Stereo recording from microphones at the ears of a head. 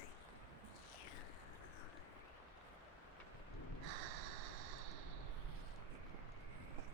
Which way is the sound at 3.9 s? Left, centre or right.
Right.